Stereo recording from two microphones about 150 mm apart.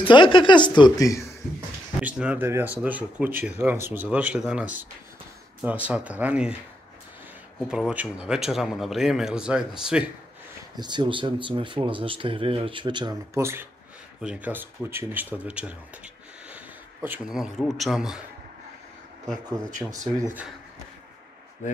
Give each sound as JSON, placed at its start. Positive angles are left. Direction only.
{"t": 0.0, "sound": "speech", "side_deg": 35}
{"t": 2.0, "sound": "speech", "side_deg": -5}
{"t": 7.6, "sound": "speech", "side_deg": -5}
{"t": 10.8, "sound": "speech", "side_deg": -30}
{"t": 13.3, "sound": "speech", "side_deg": -15}
{"t": 20.2, "sound": "speech", "side_deg": -15}